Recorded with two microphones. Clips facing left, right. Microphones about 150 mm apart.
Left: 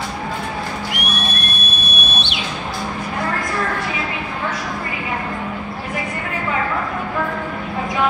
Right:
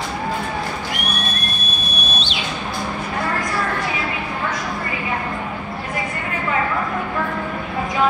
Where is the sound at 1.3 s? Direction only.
70° left (ahead or behind).